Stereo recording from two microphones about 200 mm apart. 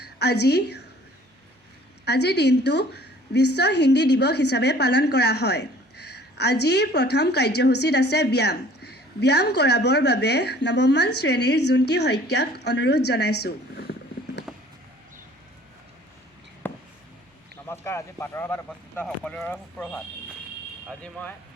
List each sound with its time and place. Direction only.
0.0 s a woman's voice: 55° left (ahead or behind)
2.0 s a woman's voice: 55° left (ahead or behind)
14.5 s a sound: 5° right (ahead or behind)
16.6 s a sound: 10° left (ahead or behind)
17.7 s speech: 10° left (ahead or behind)
21.0 s speech: 5° left (ahead or behind)